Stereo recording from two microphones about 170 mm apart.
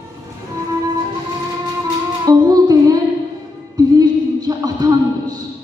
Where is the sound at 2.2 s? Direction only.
20° right (ahead or behind).